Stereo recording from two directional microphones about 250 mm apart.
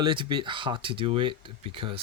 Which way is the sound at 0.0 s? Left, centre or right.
Centre.